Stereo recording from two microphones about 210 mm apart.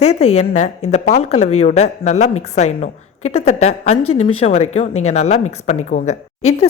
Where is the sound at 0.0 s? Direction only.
35° left (ahead or behind).